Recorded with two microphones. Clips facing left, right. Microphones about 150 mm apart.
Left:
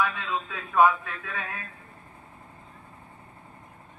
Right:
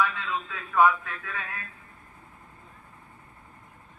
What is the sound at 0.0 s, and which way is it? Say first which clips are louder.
A man's voice: even; 20° left (ahead or behind).